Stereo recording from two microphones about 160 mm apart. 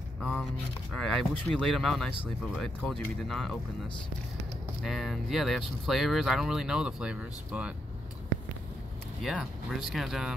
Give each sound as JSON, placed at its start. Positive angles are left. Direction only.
{"t": 0.2, "sound": "a sound", "side_deg": 5}
{"t": 0.9, "sound": "speech", "side_deg": 5}
{"t": 4.8, "sound": "speech", "side_deg": 0}
{"t": 9.2, "sound": "speech", "side_deg": 0}